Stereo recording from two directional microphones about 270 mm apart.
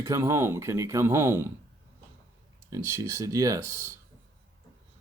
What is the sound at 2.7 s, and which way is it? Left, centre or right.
Speech, centre.